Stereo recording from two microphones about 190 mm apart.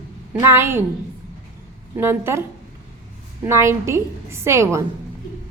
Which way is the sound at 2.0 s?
10° right (ahead or behind).